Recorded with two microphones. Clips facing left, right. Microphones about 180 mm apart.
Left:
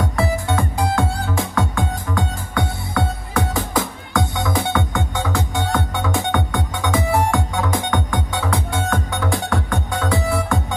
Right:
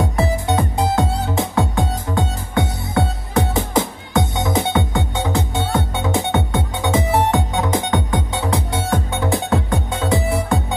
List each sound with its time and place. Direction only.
0.0 s music: 20° right (ahead or behind)